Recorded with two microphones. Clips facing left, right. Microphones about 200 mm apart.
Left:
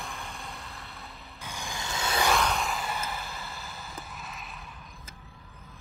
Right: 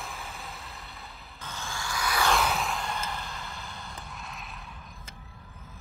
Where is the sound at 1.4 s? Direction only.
15° left (ahead or behind).